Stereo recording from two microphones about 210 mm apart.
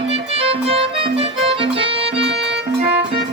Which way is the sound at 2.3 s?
55° right (ahead or behind).